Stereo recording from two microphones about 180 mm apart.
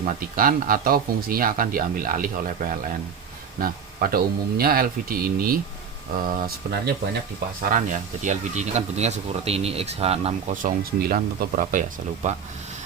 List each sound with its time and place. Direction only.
0.0 s speech: 50° right (ahead or behind)